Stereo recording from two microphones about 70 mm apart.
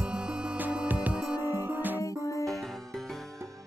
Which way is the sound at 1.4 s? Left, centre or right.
Right.